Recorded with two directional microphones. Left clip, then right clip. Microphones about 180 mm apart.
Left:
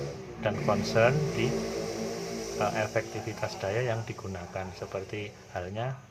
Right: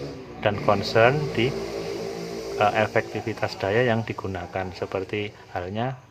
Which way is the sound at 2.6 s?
35° right (ahead or behind).